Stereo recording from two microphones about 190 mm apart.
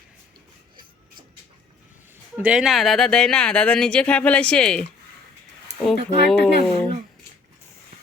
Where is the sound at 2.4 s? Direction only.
5° right (ahead or behind).